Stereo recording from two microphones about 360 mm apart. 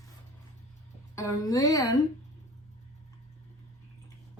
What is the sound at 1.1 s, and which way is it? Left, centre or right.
Speech, centre.